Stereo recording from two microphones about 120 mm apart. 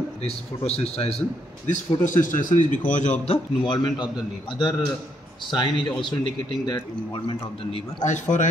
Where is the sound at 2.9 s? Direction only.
75° left (ahead or behind).